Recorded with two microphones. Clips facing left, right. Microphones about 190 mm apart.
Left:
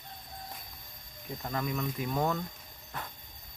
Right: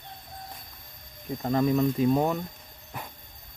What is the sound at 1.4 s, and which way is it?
Speech, 30° right (ahead or behind).